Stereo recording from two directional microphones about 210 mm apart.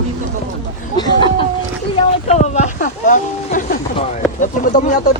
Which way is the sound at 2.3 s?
35° left (ahead or behind).